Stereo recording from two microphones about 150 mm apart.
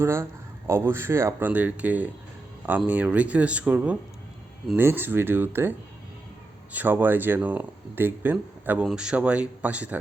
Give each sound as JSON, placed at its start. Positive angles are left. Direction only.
{"t": 0.0, "sound": "speech", "side_deg": -20}
{"t": 6.7, "sound": "speech", "side_deg": -10}